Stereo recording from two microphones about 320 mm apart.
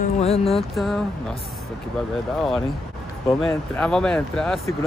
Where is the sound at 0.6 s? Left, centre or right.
Centre.